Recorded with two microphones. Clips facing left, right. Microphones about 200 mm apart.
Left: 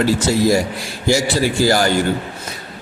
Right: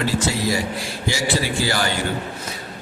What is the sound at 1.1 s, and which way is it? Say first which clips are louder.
Speech: left 7 dB; 45° left (ahead or behind).